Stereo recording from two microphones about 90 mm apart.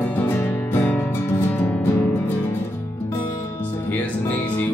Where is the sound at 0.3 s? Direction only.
20° left (ahead or behind).